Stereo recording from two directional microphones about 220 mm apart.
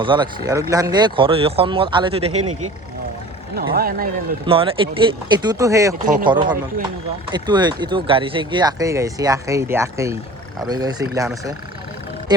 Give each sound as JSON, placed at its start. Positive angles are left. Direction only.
{"t": 0.0, "sound": "speech", "side_deg": -20}
{"t": 3.5, "sound": "speech", "side_deg": -45}
{"t": 4.4, "sound": "speech", "side_deg": -25}
{"t": 7.3, "sound": "speech", "side_deg": -20}